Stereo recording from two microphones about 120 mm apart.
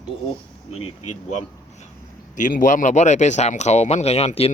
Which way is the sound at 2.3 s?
90° left.